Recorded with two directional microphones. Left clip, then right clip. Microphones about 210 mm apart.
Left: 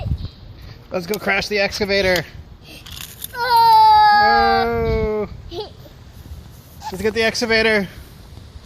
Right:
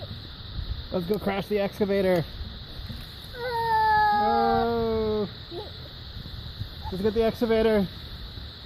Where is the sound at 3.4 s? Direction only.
15° left (ahead or behind).